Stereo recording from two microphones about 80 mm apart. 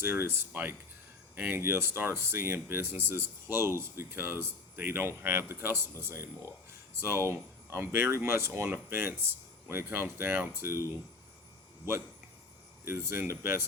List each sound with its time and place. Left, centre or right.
0.0 s speech: right
12.8 s speech: right